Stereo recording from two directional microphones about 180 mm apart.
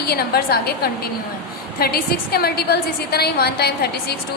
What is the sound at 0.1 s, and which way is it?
A woman's voice, 60° left (ahead or behind).